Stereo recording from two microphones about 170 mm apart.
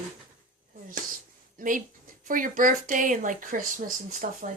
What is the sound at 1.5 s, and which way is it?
Speech, 50° right (ahead or behind).